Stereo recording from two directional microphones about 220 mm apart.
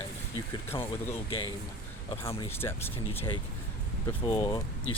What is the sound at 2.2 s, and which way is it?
Speech, 15° left (ahead or behind).